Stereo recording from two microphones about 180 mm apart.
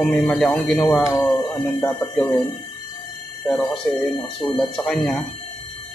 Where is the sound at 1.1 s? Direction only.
15° left (ahead or behind).